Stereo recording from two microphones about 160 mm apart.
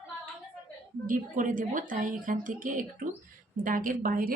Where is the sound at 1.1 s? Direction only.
55° right (ahead or behind).